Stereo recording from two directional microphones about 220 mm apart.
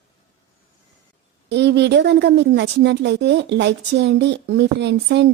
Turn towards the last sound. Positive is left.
turn(degrees=-50)  # may be behind; listen again after turning